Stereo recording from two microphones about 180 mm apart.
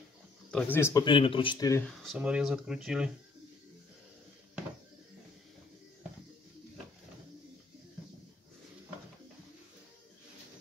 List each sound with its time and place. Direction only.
0.5 s speech: 5° left (ahead or behind)
1.0 s speech: 30° left (ahead or behind)
1.9 s speech: centre (ahead or behind)